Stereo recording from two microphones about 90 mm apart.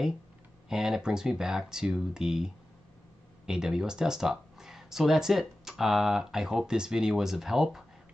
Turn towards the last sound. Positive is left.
turn(degrees=-5)  # may be behind; listen again after turning